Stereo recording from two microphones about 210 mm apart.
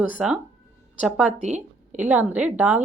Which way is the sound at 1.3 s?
35° right (ahead or behind).